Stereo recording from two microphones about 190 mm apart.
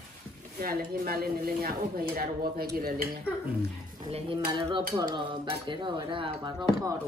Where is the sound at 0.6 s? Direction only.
50° right (ahead or behind).